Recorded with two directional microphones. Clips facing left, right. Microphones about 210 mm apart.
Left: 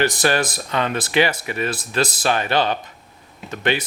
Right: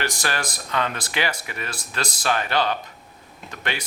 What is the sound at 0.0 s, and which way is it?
Speech, 20° left (ahead or behind).